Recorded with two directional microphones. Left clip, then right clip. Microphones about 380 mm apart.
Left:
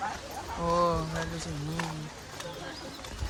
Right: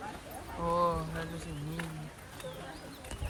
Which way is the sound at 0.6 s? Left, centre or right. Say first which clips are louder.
Left 3 dB; centre.